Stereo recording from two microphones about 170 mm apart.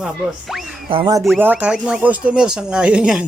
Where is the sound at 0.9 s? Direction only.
30° right (ahead or behind).